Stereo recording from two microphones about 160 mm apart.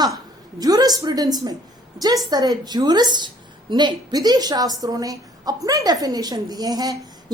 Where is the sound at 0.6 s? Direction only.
25° right (ahead or behind).